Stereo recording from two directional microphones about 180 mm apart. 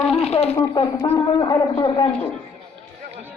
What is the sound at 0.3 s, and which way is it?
A man's voice, 35° left (ahead or behind).